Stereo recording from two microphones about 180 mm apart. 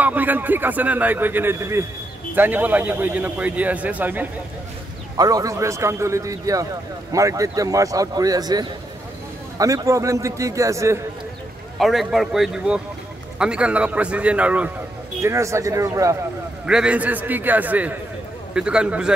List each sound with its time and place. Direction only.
0.0 s a man's voice: 10° right (ahead or behind)
5.1 s a man's voice: 20° right (ahead or behind)
11.8 s a man's voice: centre (ahead or behind); by 16.2 s 15° right (ahead or behind)
16.6 s a man's voice: 5° right (ahead or behind)